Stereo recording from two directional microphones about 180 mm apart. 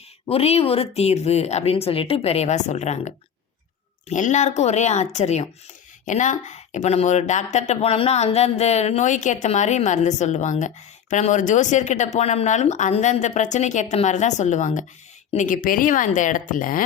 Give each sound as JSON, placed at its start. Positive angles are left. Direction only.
{"t": 0.3, "sound": "speech", "side_deg": 35}
{"t": 4.1, "sound": "speech", "side_deg": 40}